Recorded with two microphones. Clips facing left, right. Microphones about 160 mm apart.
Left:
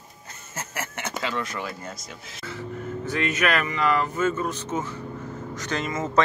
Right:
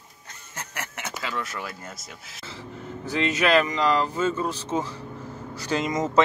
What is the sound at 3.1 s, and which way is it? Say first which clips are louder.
Speech: right 4 dB; 30° right (ahead or behind).